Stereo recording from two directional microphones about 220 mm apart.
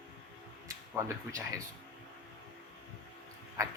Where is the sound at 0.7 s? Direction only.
15° right (ahead or behind).